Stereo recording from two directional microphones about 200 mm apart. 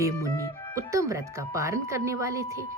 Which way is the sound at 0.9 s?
15° right (ahead or behind).